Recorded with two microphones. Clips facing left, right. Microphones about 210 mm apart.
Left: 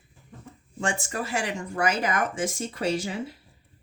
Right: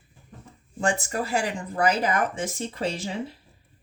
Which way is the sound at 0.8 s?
35° right (ahead or behind).